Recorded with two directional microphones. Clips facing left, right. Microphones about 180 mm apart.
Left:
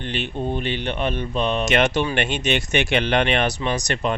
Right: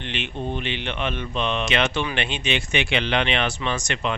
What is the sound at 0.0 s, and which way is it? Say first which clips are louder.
Speech: left 3 dB; 40° left (ahead or behind).